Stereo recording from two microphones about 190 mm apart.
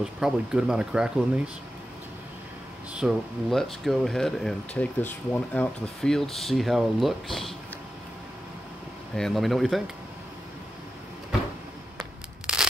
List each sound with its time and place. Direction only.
0.0 s speech: 5° right (ahead or behind)
2.9 s speech: 5° right (ahead or behind)
9.1 s speech: centre (ahead or behind)
12.0 s a sound: 5° right (ahead or behind)